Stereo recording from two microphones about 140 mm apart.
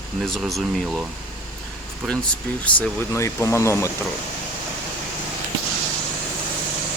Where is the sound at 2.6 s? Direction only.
10° left (ahead or behind).